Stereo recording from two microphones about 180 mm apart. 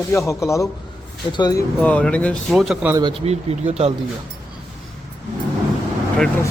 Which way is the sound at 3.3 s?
35° right (ahead or behind).